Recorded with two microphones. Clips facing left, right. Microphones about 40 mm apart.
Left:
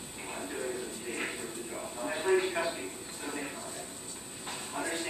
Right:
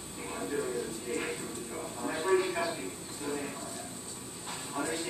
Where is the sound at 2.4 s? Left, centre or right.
Left.